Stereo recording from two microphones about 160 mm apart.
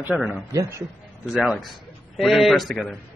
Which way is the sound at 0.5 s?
20° right (ahead or behind).